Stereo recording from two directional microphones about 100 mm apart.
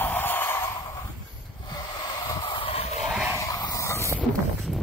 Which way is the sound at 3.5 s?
35° left (ahead or behind).